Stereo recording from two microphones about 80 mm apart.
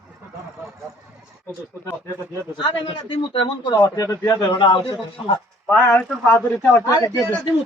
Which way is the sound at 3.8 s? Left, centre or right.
Left.